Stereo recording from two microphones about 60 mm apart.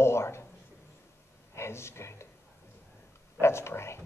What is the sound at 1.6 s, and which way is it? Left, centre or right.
Speech, left.